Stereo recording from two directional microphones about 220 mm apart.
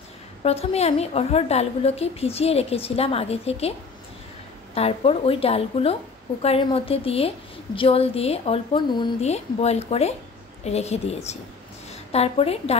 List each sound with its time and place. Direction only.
0.4 s a woman's voice: 30° left (ahead or behind)
4.7 s a woman's voice: 25° left (ahead or behind)